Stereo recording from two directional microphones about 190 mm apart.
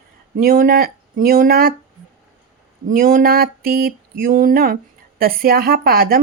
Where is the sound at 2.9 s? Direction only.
50° right (ahead or behind).